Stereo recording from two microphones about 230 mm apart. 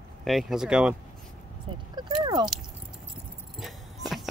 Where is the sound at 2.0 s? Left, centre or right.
Centre.